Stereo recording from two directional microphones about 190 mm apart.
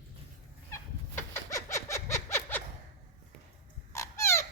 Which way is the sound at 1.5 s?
15° left (ahead or behind).